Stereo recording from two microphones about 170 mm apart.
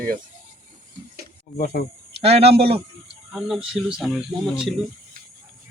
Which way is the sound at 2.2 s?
35° right (ahead or behind).